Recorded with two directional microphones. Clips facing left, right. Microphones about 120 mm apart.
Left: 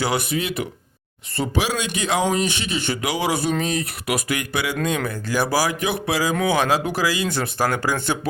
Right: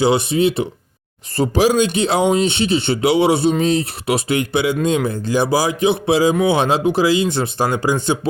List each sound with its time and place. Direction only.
0.0 s speech: 25° right (ahead or behind)